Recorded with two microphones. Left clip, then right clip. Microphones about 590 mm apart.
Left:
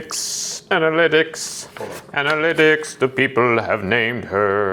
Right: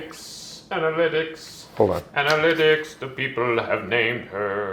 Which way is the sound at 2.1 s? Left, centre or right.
Left.